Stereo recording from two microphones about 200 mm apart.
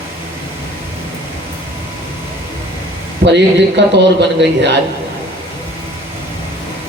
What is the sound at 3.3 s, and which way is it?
A man's voice, 60° right (ahead or behind).